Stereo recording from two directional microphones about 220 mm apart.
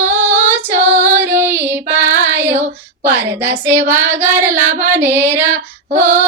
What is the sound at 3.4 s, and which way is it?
Child singing, 10° right (ahead or behind).